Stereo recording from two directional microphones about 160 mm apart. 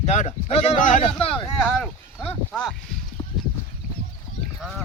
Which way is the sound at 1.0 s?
35° left (ahead or behind).